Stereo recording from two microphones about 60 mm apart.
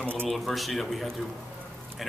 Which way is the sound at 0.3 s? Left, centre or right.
Centre.